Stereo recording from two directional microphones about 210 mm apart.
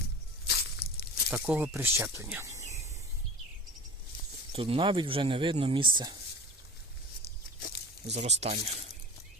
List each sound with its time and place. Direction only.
0.4 s tearing: 50° left (ahead or behind)
1.4 s speech: 5° right (ahead or behind)
4.5 s speech: 25° right (ahead or behind)
7.6 s a sound: 50° left (ahead or behind)
8.1 s speech: 30° right (ahead or behind)